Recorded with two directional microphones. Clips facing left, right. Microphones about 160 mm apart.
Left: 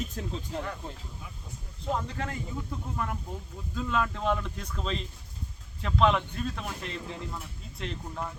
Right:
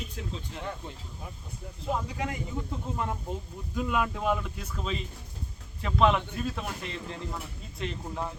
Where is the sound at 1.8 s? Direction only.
5° right (ahead or behind).